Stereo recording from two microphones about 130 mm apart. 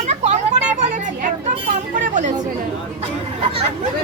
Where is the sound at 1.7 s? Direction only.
75° right (ahead or behind).